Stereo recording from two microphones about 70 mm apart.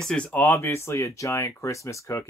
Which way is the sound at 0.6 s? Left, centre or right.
Left.